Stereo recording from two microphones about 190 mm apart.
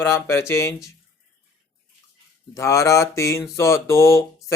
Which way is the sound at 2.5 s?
15° left (ahead or behind).